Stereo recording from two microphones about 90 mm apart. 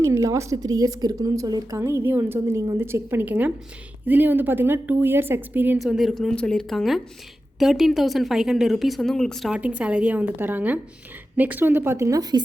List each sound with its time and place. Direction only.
0.0 s a woman's voice: 35° right (ahead or behind)
1.8 s speech: 30° right (ahead or behind)
5.8 s speech: 5° right (ahead or behind)
9.5 s a woman's voice: 15° right (ahead or behind)
11.9 s a woman's voice: 35° right (ahead or behind)